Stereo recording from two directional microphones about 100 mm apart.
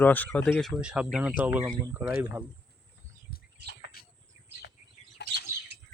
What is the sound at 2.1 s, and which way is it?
Speech, 25° right (ahead or behind).